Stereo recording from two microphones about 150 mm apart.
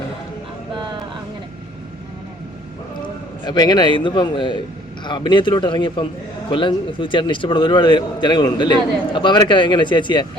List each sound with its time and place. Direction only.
3.4 s a man's voice: 25° left (ahead or behind)